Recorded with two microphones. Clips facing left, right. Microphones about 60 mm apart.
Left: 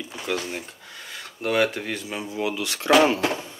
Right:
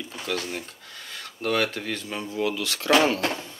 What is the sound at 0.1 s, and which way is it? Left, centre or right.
Speech, centre.